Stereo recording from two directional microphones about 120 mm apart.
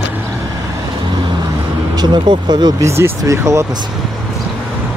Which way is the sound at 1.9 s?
35° right (ahead or behind).